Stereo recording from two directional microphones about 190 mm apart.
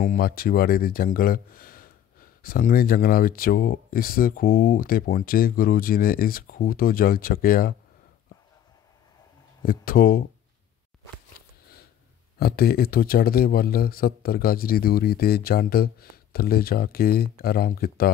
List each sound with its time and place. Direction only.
0.0 s a man's voice: 50° left (ahead or behind)
9.6 s a man's voice: 50° left (ahead or behind)
11.4 s a sound: 50° left (ahead or behind)
12.4 s a man's voice: 55° left (ahead or behind)